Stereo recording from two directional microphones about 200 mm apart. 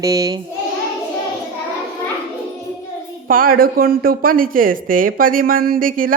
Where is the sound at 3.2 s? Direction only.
45° right (ahead or behind).